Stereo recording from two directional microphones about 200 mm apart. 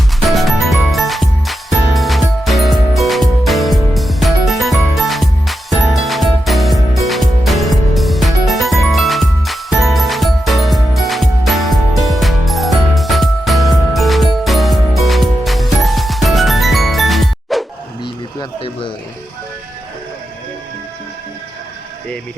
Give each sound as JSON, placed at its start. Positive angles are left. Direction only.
{"t": 0.2, "sound": "music", "side_deg": 0}
{"t": 18.3, "sound": "music", "side_deg": 25}